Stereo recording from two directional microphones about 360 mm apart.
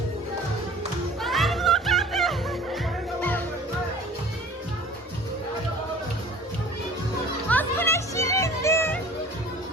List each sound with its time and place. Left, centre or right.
1.2 s music: centre
7.5 s music: centre